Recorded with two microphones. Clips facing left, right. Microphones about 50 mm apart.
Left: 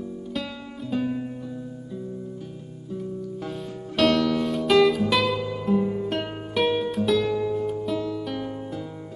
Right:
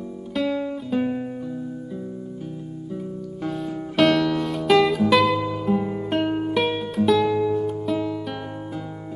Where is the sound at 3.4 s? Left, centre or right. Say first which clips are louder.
Right 5 dB; centre.